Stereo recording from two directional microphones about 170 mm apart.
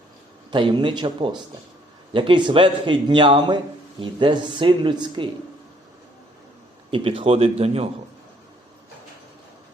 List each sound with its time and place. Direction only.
0.5 s a man's voice: 30° right (ahead or behind)
6.9 s a man's voice: 30° right (ahead or behind)